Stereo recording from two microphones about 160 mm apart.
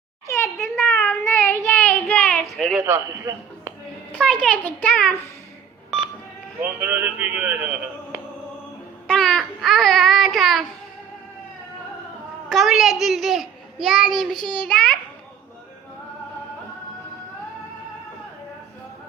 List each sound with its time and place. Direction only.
0.3 s a sound: 15° left (ahead or behind)
0.6 s child singing: 15° left (ahead or behind)
2.8 s a man's voice: 15° right (ahead or behind)
4.1 s a child's voice: 5° left (ahead or behind)
6.6 s a man's voice: 10° right (ahead or behind)
9.0 s speech: 5° left (ahead or behind)
12.5 s a child's voice: centre (ahead or behind)